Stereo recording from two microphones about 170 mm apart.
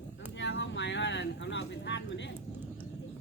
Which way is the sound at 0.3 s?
90° left.